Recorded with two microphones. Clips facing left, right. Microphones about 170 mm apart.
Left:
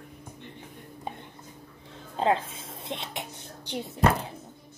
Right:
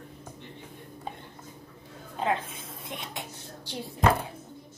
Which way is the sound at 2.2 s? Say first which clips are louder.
Left 4 dB; 30° left (ahead or behind).